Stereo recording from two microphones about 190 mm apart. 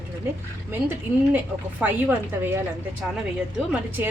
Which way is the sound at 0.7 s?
10° right (ahead or behind).